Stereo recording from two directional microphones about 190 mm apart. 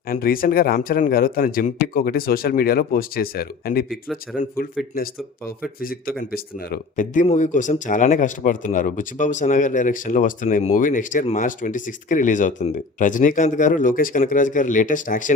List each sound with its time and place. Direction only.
0.1 s speech: 50° left (ahead or behind)
3.8 s speech: centre (ahead or behind)
4.4 s speech: 50° left (ahead or behind)